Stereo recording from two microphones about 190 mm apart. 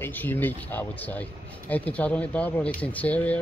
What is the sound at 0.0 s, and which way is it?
Speech, 10° left (ahead or behind).